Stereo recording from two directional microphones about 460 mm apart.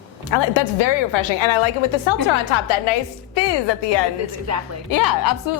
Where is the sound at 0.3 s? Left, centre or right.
Left.